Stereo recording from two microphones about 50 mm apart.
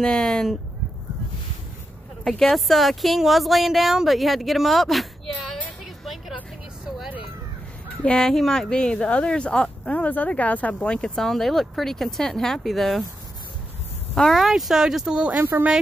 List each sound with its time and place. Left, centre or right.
0.0 s speech: centre
2.2 s speech: centre
8.0 s speech: centre
11.1 s speech: centre
14.3 s speech: centre
15.3 s speech: right